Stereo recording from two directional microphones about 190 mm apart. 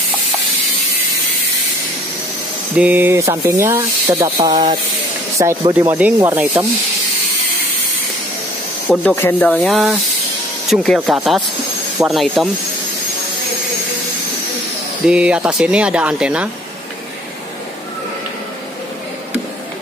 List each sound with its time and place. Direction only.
2.7 s speech: 10° right (ahead or behind)
8.8 s speech: 5° right (ahead or behind)
9.1 s speech: 10° left (ahead or behind)
15.0 s speech: 5° right (ahead or behind)